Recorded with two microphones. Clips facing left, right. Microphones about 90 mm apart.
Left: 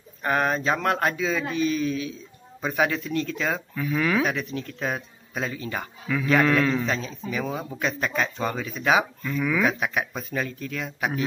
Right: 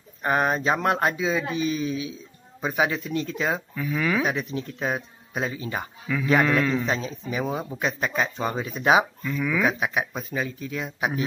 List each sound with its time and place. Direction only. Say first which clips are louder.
0.2 s speech: right 1 dB; 20° right (ahead or behind)
3.7 s speech: left 1 dB; centre (ahead or behind)
4.3 s speech: right 1 dB; 15° right (ahead or behind)
6.9 s speech: right 1 dB; 20° right (ahead or behind)
9.2 s speech: left 1 dB; centre (ahead or behind)
9.7 s speech: right 1 dB; 10° right (ahead or behind)